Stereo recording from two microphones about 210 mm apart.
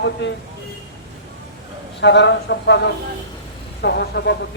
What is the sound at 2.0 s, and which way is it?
A man's voice, 55° left (ahead or behind).